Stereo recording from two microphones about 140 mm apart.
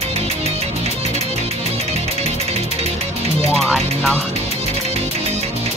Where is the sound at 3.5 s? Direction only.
Centre (ahead or behind).